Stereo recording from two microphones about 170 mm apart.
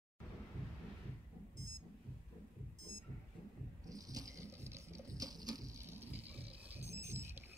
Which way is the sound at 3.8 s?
20° right (ahead or behind).